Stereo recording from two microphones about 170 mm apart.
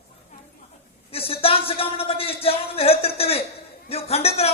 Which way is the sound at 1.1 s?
35° left (ahead or behind).